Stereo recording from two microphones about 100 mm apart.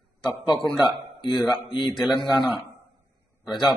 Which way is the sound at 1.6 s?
50° left (ahead or behind).